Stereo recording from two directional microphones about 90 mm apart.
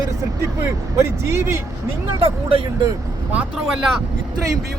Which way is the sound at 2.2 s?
90° right.